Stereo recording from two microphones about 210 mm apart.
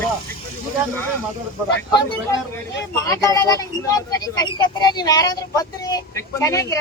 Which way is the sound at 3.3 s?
15° left (ahead or behind).